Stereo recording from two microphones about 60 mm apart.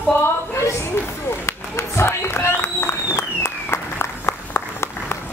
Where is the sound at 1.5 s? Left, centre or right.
Left.